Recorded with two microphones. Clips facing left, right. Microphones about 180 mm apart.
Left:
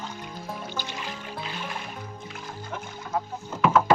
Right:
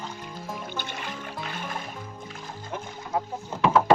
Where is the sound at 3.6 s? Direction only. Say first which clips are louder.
Even; 30° right (ahead or behind).